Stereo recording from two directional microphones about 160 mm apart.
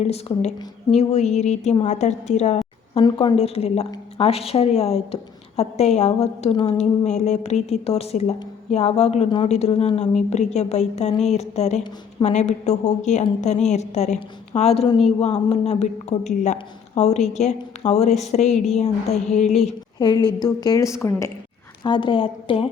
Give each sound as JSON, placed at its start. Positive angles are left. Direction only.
{"t": 0.0, "sound": "a woman's voice", "side_deg": 40}
{"t": 3.0, "sound": "a woman's voice", "side_deg": 30}
{"t": 7.0, "sound": "a woman's voice", "side_deg": 45}
{"t": 20.0, "sound": "a woman's voice", "side_deg": 25}